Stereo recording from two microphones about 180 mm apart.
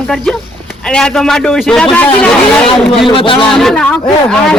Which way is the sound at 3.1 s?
30° left (ahead or behind).